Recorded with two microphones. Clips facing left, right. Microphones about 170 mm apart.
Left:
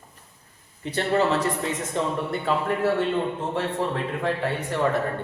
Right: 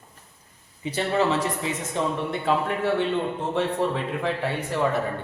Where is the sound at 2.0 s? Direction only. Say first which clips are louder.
Even; centre (ahead or behind).